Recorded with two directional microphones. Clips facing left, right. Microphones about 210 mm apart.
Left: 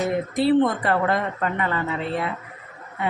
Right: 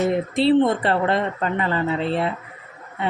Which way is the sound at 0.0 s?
25° right (ahead or behind).